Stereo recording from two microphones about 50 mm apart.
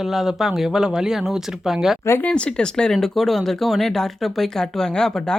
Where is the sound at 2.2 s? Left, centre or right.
Left.